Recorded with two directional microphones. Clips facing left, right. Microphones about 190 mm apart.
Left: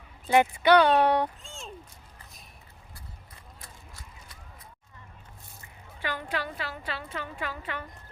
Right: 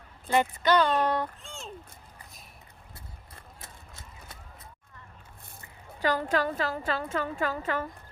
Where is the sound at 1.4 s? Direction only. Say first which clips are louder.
Right 1 dB; centre (ahead or behind).